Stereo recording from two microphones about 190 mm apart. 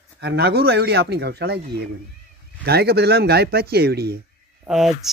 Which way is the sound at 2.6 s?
55° right (ahead or behind).